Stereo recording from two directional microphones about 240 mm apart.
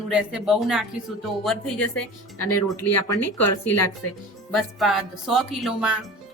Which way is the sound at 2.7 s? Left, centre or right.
Left.